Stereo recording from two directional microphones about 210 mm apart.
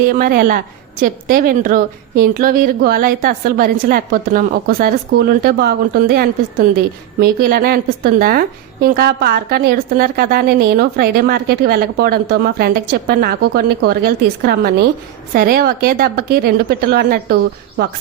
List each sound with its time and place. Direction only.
0.0 s a woman's voice: 45° right (ahead or behind)